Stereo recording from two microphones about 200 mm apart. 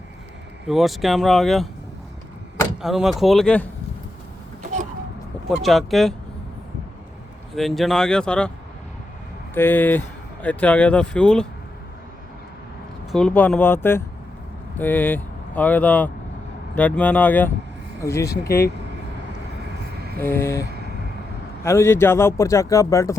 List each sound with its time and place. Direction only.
0.7 s speech: centre (ahead or behind)
2.8 s speech: centre (ahead or behind)
5.6 s speech: centre (ahead or behind)
7.5 s speech: centre (ahead or behind)
9.6 s speech: 10° left (ahead or behind)
13.1 s speech: 5° left (ahead or behind)
20.1 s speech: 10° left (ahead or behind)
20.7 s vehicle: 55° right (ahead or behind)
21.6 s speech: 15° left (ahead or behind)